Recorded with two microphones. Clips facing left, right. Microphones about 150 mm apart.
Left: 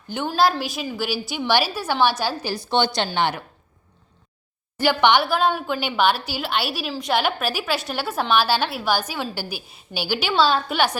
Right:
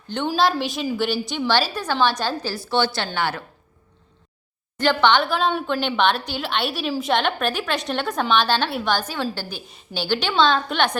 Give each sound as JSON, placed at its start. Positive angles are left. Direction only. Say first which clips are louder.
{"t": 0.3, "sound": "a woman's voice", "louder": "even", "side_deg": 0}
{"t": 4.8, "sound": "a woman's voice", "louder": "even", "side_deg": 10}